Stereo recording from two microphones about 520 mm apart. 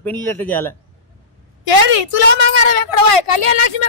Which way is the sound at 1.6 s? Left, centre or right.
Left.